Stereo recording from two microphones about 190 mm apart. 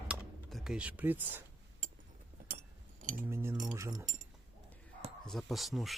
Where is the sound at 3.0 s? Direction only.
45° right (ahead or behind).